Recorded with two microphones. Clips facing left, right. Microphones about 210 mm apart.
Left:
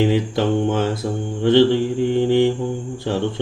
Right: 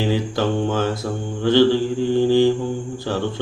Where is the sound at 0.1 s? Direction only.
20° left (ahead or behind).